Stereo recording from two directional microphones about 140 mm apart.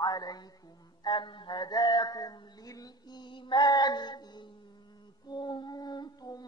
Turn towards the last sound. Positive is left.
turn(degrees=30)  # may be behind; listen again after turning